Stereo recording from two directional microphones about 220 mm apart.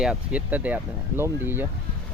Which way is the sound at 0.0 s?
5° right (ahead or behind).